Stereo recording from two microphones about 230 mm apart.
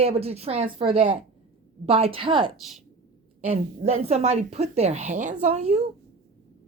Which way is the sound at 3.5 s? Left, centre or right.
Right.